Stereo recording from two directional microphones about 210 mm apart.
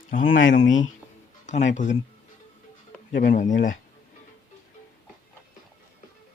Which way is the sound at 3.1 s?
40° left (ahead or behind).